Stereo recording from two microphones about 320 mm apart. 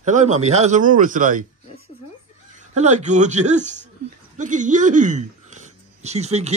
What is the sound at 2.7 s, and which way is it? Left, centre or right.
Speech, right.